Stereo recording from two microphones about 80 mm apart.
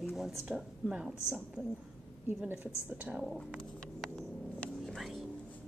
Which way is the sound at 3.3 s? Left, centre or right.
Centre.